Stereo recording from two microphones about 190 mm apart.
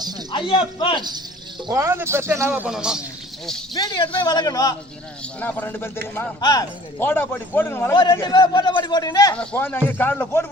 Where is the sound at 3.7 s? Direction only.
20° left (ahead or behind).